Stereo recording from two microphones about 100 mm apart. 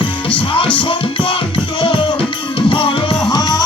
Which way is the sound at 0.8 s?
60° left (ahead or behind).